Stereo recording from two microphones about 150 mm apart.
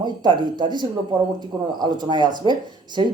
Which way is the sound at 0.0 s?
30° right (ahead or behind).